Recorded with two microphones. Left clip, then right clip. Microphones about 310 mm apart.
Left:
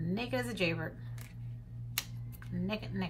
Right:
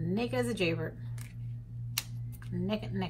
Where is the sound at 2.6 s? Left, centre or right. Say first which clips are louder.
Right 3 dB; centre.